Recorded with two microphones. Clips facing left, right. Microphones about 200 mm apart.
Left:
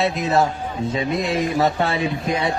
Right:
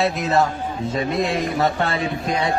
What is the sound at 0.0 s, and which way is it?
Speech, centre (ahead or behind).